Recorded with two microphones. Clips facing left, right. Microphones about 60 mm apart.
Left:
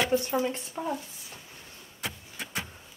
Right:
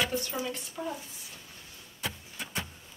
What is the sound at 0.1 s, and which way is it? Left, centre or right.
Speech, left.